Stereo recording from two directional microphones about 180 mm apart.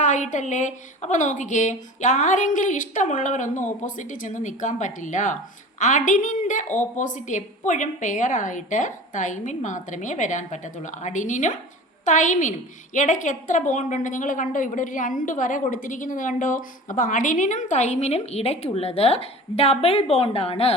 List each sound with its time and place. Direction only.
0.0 s a woman's voice: 40° left (ahead or behind)